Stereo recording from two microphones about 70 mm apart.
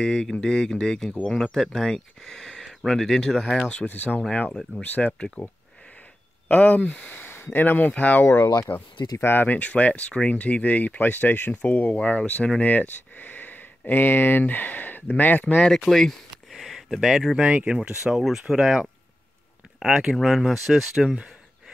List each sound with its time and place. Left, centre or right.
0.0 s speech: centre
3.6 s speech: left
6.5 s speech: left
8.7 s speech: left
9.2 s speech: left
15.6 s speech: centre
17.4 s speech: centre